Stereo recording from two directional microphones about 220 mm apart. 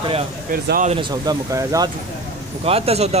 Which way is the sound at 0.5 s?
40° right (ahead or behind).